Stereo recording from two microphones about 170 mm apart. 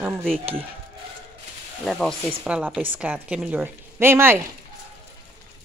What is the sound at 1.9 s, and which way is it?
Speech, 5° left (ahead or behind).